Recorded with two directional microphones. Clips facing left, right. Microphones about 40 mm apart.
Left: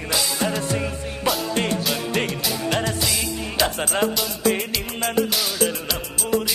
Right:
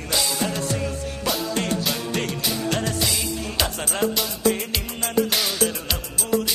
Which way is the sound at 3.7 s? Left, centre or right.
Left.